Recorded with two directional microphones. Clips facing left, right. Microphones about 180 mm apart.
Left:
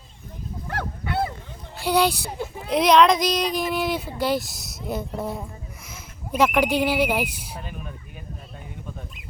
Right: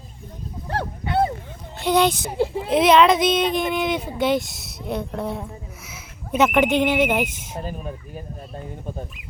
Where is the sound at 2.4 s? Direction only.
30° right (ahead or behind).